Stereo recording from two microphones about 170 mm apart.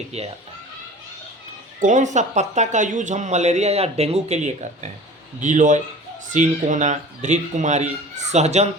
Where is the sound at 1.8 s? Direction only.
45° right (ahead or behind).